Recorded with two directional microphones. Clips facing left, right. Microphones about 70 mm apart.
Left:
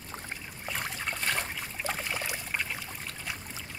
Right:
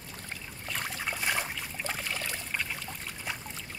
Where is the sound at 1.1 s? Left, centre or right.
Centre.